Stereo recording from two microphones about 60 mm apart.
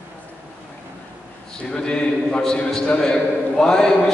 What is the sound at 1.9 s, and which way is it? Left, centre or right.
A man's voice, centre.